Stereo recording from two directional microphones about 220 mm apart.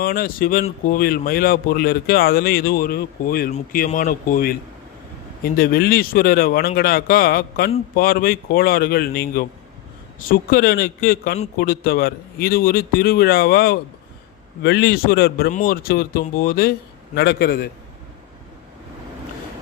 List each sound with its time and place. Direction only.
0.0 s a man's voice: 40° left (ahead or behind)